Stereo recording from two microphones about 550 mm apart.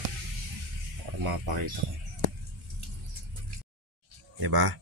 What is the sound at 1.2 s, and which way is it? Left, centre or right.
Speech, right.